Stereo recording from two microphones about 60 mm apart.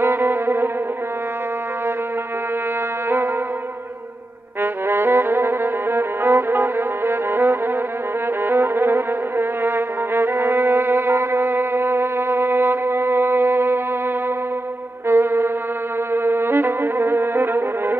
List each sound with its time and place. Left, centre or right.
0.0 s music: right
4.6 s music: right
15.0 s music: right